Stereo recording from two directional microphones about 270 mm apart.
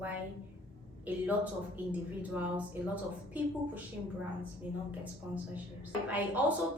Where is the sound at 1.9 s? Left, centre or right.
Centre.